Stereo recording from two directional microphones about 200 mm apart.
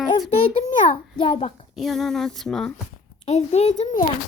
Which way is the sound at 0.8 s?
40° left (ahead or behind).